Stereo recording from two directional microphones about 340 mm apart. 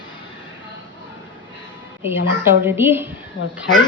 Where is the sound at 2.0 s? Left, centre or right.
Centre.